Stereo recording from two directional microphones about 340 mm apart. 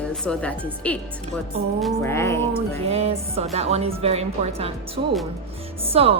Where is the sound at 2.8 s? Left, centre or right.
Centre.